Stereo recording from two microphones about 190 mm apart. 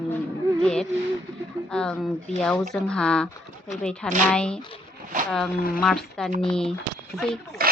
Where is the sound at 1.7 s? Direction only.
5° left (ahead or behind).